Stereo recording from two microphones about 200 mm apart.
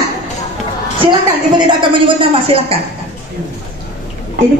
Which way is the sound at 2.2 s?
30° right (ahead or behind).